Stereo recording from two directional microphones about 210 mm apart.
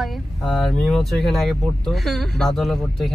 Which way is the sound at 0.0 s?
Centre (ahead or behind).